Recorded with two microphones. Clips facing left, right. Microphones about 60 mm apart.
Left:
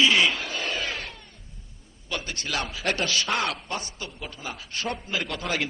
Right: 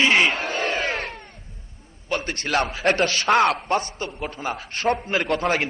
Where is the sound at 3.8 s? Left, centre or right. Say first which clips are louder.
Right 8 dB; right.